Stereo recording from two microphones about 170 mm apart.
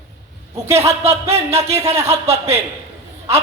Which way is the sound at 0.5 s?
15° right (ahead or behind).